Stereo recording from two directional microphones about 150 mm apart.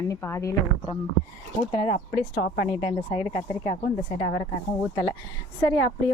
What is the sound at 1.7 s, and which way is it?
Speech, 40° left (ahead or behind).